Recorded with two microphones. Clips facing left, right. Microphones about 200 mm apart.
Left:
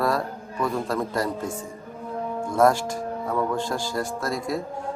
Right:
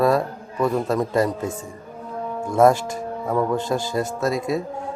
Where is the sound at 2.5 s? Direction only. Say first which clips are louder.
Right 4 dB; 20° right (ahead or behind).